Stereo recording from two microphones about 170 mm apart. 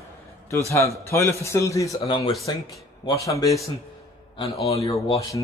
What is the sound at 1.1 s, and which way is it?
A man's voice, 15° left (ahead or behind).